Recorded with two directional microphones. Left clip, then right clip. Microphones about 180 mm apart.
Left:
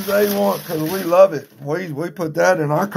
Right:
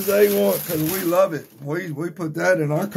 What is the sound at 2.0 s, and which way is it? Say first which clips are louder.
Speech: left 10 dB; 20° left (ahead or behind).